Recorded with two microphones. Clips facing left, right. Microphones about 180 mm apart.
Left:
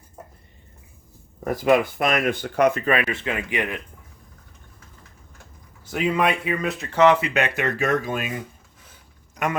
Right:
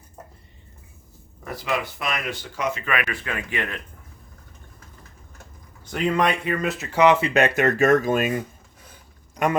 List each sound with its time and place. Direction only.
1.5 s speech: 50° left (ahead or behind)
2.8 s speech: 30° left (ahead or behind); by 3.8 s 15° left (ahead or behind)
5.8 s speech: 5° left (ahead or behind)
7.2 s speech: 35° right (ahead or behind)